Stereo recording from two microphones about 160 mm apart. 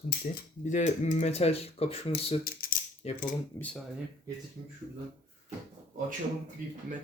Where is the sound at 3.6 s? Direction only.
10° left (ahead or behind).